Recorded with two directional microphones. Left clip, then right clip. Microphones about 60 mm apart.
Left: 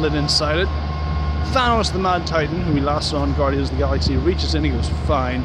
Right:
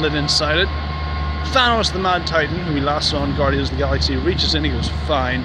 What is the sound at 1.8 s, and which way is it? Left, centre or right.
Speech, left.